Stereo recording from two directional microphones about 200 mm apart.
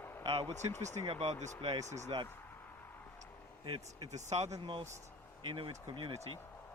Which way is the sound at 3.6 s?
25° right (ahead or behind).